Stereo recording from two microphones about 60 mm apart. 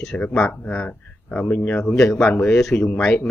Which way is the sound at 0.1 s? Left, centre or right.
Left.